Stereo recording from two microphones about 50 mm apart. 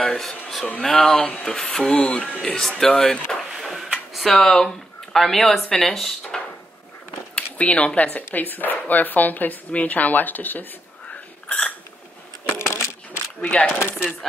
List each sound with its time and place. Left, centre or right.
0.3 s speech: centre
3.5 s a sound: centre
4.1 s speech: centre
7.5 s speech: left
11.4 s hiccup: left
12.4 s coin: left
13.4 s speech: left
13.7 s chopping: left